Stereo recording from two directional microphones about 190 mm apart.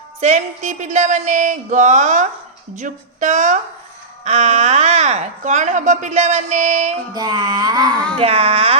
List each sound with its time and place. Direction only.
0.2 s speech: 35° right (ahead or behind)
7.1 s music: 20° right (ahead or behind)
7.9 s speech: 5° left (ahead or behind)
8.2 s speech: 30° right (ahead or behind)